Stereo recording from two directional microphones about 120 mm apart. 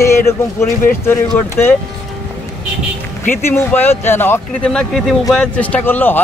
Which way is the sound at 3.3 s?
20° left (ahead or behind).